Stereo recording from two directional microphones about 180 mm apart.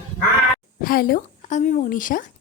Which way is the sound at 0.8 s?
55° left (ahead or behind).